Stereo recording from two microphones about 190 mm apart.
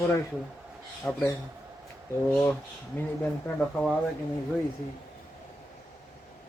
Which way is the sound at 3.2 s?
5° left (ahead or behind).